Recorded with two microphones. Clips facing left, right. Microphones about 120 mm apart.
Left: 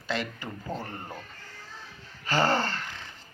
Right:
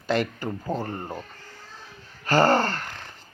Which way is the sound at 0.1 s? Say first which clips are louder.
Right 7 dB; 45° right (ahead or behind).